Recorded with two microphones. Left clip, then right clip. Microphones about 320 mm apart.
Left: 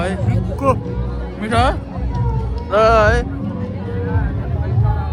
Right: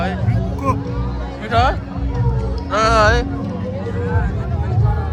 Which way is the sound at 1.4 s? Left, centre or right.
Centre.